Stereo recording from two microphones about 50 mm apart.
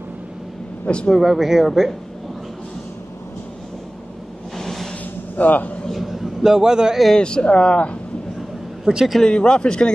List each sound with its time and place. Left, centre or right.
0.8 s speech: centre
1.1 s speech: centre
4.6 s a sound: centre
5.3 s speech: left
5.9 s a sound: centre
7.2 s speech: centre
8.8 s speech: centre
9.2 s speech: centre